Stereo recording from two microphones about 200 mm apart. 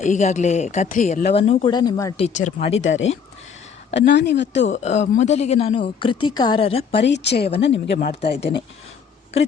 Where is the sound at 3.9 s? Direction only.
60° left (ahead or behind).